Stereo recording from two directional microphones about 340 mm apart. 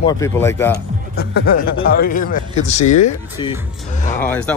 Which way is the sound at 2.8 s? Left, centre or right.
Left.